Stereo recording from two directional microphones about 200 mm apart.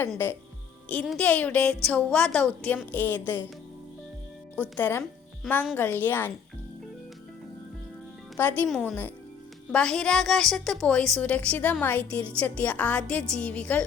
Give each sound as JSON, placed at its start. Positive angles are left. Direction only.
{"t": 0.1, "sound": "speech", "side_deg": 10}
{"t": 4.5, "sound": "a woman's voice", "side_deg": 10}
{"t": 8.4, "sound": "a woman's voice", "side_deg": 10}